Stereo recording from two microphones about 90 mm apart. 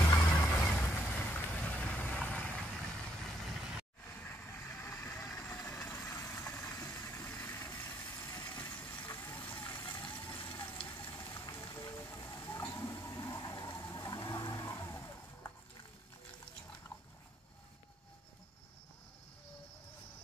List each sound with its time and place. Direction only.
0.0 s music: 25° left (ahead or behind)
0.3 s vehicle: 20° left (ahead or behind); by 3.8 s 5° right (ahead or behind)
4.1 s vehicle: 20° left (ahead or behind)
5.1 s vehicle: 5° left (ahead or behind)
6.0 s vehicle: 30° left (ahead or behind)
7.1 s vehicle: 20° left (ahead or behind)
9.8 s vehicle: 60° left (ahead or behind)
10.1 s vehicle: 20° left (ahead or behind)
11.9 s a sound: 35° left (ahead or behind)
13.7 s vehicle: 35° left (ahead or behind)